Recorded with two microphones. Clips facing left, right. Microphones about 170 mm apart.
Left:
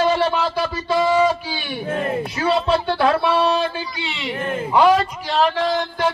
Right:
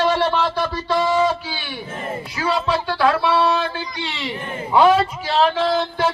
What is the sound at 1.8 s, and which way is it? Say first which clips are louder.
Speech: left 8 dB; 60° left (ahead or behind).